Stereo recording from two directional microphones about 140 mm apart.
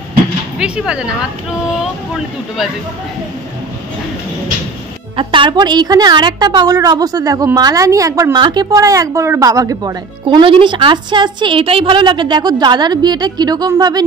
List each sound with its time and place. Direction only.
0.6 s speech: 5° right (ahead or behind)
5.1 s a woman's voice: 35° right (ahead or behind)
10.2 s a woman's voice: 40° right (ahead or behind)